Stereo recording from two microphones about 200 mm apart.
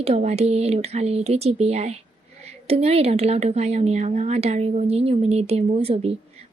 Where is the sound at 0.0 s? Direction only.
30° right (ahead or behind).